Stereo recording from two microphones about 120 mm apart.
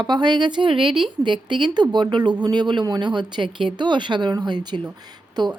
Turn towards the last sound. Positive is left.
turn(degrees=-35)  # may be behind; listen again after turning